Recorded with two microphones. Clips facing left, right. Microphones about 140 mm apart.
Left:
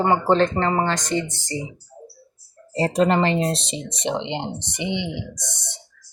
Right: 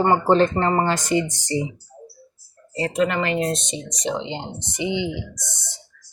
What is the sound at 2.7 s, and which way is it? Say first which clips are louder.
Speech: left 3 dB; 35° left (ahead or behind).